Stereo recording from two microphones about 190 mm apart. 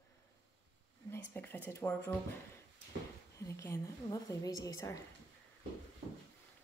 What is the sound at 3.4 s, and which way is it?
A woman's voice, 15° left (ahead or behind).